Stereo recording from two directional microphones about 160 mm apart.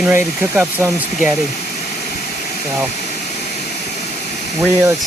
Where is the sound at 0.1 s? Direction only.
10° right (ahead or behind).